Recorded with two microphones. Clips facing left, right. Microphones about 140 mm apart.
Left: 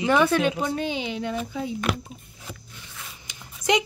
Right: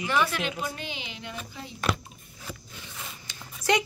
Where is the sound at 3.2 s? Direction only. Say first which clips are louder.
Left 3 dB; 15° left (ahead or behind).